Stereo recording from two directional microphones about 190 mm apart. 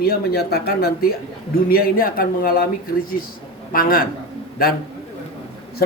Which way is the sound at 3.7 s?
50° left (ahead or behind).